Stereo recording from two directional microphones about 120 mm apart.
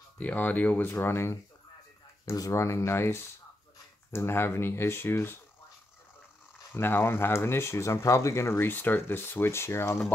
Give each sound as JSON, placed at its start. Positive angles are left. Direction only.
{"t": 0.2, "sound": "speech", "side_deg": 15}
{"t": 6.7, "sound": "speech", "side_deg": 20}